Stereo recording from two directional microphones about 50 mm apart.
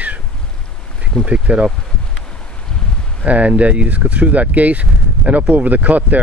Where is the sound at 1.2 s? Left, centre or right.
Right.